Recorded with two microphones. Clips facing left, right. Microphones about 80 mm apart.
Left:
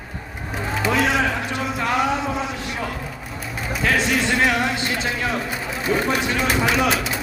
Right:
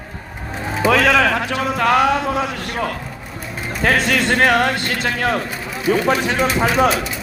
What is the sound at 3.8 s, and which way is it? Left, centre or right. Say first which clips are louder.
Speech: right 4 dB; right.